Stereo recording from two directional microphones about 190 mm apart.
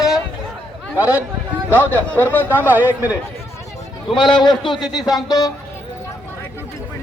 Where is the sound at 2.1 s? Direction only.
10° left (ahead or behind).